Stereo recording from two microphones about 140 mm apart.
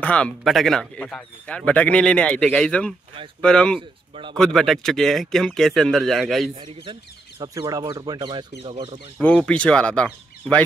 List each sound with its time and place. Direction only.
0.0 s a man's voice: 10° left (ahead or behind)
4.1 s speech: 35° right (ahead or behind)
4.4 s speech: 5° left (ahead or behind)
6.7 s speech: 40° right (ahead or behind)
7.3 s speech: 25° right (ahead or behind)
9.2 s a man's voice: 10° left (ahead or behind)